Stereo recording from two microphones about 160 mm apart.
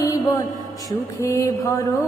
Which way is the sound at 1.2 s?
20° left (ahead or behind).